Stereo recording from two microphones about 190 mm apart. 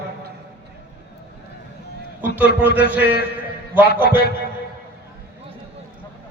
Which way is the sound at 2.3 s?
10° right (ahead or behind).